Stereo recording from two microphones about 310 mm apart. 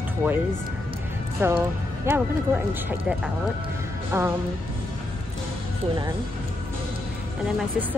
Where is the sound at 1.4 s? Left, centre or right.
Centre.